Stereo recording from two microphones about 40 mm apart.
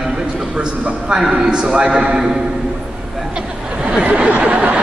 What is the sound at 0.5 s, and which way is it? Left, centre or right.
A man's voice, right.